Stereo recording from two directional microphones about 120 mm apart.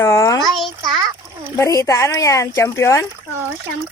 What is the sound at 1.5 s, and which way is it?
Speech, 25° left (ahead or behind).